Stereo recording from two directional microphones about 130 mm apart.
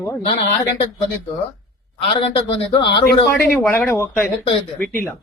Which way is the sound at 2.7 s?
40° left (ahead or behind).